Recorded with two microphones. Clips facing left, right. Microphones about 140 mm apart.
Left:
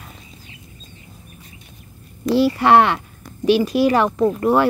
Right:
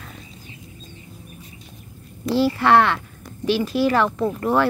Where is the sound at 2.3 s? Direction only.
15° left (ahead or behind).